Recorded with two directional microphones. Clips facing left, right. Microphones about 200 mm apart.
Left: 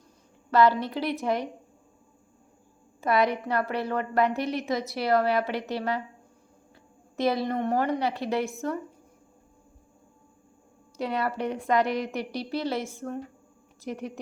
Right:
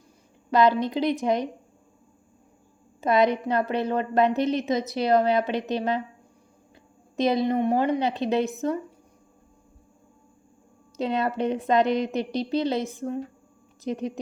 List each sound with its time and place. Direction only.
0.5 s a woman's voice: 15° right (ahead or behind)
3.0 s a woman's voice: 20° right (ahead or behind)
7.2 s a woman's voice: 20° right (ahead or behind)
10.9 s a woman's voice: 20° right (ahead or behind)